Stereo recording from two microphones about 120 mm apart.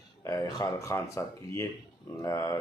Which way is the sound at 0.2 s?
25° left (ahead or behind).